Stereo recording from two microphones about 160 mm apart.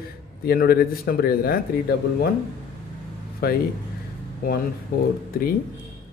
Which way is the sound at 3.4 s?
75° left (ahead or behind).